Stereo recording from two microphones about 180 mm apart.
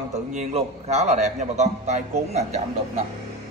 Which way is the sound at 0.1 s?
40° right (ahead or behind).